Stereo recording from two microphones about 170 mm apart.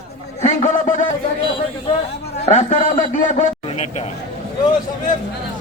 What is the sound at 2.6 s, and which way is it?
A man's voice, 45° left (ahead or behind).